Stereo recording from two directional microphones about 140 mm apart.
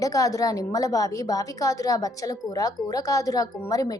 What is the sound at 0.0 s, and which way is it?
A woman's voice, 25° left (ahead or behind).